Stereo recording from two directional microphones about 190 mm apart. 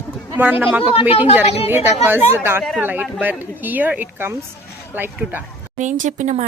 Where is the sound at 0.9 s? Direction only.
30° left (ahead or behind).